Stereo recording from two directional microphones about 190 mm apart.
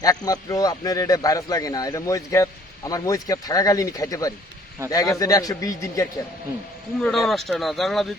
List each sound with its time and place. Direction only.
0.0 s a man's voice: 20° left (ahead or behind)
7.0 s speech: centre (ahead or behind)